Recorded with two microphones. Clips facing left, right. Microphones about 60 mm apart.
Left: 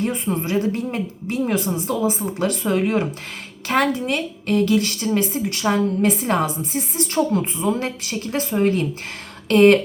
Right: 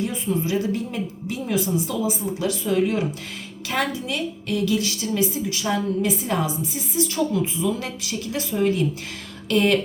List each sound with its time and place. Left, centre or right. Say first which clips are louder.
0.0 s speech: left 2 dB; left